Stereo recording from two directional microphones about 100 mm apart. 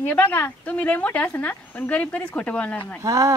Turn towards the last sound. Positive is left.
turn(degrees=-35)  # may be behind; listen again after turning